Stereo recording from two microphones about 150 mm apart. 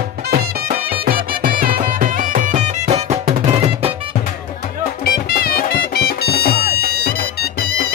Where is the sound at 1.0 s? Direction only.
75° right (ahead or behind); by 3.9 s 40° right (ahead or behind).